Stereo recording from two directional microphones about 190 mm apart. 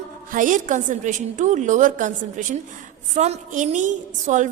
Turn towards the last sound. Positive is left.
turn(degrees=-40)  # may be behind; listen again after turning